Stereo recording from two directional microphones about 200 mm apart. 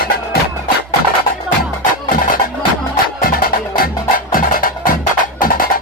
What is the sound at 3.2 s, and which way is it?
Music, 45° left (ahead or behind).